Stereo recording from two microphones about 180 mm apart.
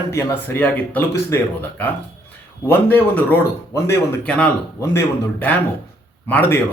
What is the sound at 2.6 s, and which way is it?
Speech, 10° left (ahead or behind).